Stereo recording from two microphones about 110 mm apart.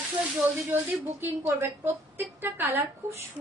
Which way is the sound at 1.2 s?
20° right (ahead or behind).